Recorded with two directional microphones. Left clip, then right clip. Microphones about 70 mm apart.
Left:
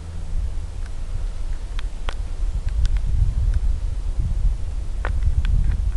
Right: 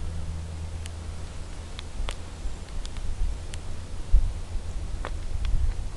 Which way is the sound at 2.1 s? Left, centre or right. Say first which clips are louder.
Left 4 dB; left.